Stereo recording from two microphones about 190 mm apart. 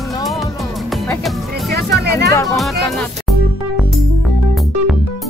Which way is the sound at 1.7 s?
60° right (ahead or behind).